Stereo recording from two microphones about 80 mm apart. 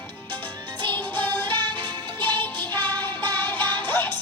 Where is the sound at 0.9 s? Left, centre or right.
Left.